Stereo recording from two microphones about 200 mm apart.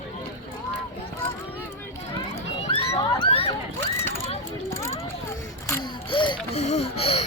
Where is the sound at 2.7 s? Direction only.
30° left (ahead or behind).